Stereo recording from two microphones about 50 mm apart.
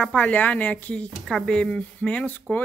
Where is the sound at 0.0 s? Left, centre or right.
Left.